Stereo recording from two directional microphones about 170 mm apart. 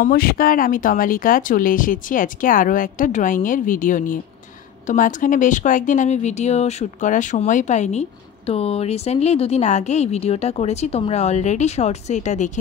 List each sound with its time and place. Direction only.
0.0 s speech: 60° left (ahead or behind); by 12.5 s 45° left (ahead or behind)